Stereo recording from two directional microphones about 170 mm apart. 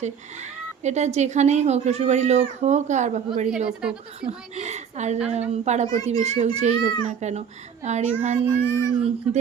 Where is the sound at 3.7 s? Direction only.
5° right (ahead or behind).